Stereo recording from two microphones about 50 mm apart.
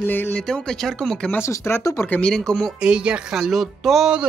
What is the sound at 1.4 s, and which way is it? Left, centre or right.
Speech, left.